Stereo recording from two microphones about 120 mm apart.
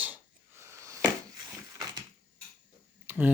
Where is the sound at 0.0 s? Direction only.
15° right (ahead or behind).